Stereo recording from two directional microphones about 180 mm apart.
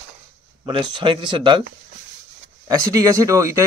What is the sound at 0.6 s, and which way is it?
Speech, 30° right (ahead or behind).